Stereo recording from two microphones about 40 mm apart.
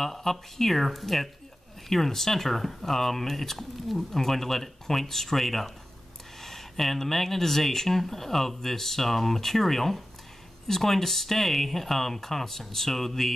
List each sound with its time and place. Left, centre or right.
0.0 s speech: centre